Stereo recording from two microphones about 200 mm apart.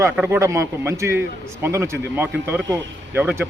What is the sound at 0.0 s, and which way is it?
A man's voice, 15° right (ahead or behind).